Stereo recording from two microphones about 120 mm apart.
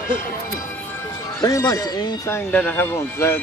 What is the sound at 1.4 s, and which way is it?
Speech, 30° left (ahead or behind).